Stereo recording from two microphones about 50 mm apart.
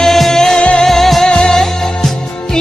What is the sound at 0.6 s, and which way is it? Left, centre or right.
Music, left.